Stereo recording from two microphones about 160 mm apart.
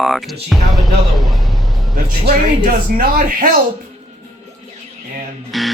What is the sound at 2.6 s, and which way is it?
Speech, 60° right (ahead or behind).